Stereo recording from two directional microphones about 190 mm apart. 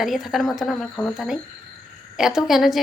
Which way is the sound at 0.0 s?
Centre (ahead or behind).